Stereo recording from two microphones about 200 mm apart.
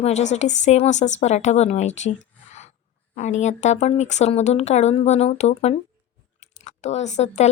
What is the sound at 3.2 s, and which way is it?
Speech, 35° left (ahead or behind).